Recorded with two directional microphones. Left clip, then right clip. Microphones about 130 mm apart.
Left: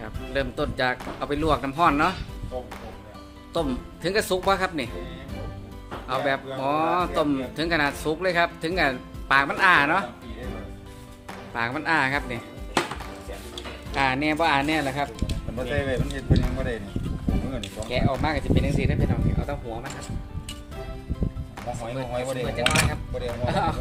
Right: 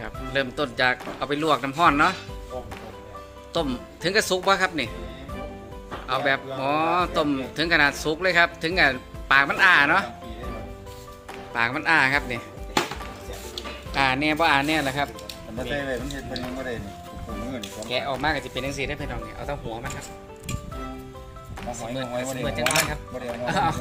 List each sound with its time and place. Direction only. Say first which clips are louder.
0.0 s speech: right 2 dB; centre (ahead or behind)
3.5 s a man's voice: even; 5° left (ahead or behind)
6.1 s a man's voice: right 2 dB; 5° left (ahead or behind)
11.5 s speech: right 3 dB; 5° left (ahead or behind)
13.9 s speech: right 1 dB; centre (ahead or behind)
15.7 s speech: left 1 dB; 40° left (ahead or behind)
17.8 s speech: right 1 dB; 5° left (ahead or behind)
21.9 s speech: left 1 dB; 5° left (ahead or behind)